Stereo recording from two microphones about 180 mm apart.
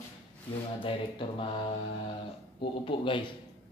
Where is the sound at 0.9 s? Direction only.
30° left (ahead or behind).